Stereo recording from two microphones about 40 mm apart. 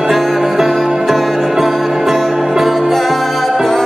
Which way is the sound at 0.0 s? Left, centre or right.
Centre.